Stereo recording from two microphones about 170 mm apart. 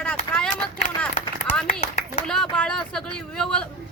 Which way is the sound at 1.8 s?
40° left (ahead or behind).